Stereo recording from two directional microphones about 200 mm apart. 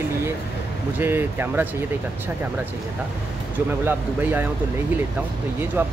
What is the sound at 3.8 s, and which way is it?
Speech, 10° right (ahead or behind).